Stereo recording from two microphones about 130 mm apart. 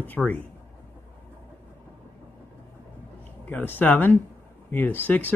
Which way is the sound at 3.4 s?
15° left (ahead or behind).